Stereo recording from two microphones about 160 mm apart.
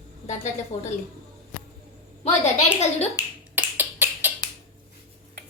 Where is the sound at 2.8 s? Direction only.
45° left (ahead or behind).